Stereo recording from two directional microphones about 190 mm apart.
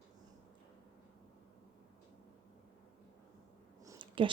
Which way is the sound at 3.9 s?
25° right (ahead or behind).